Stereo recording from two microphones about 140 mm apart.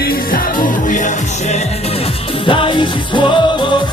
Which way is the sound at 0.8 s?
65° left (ahead or behind).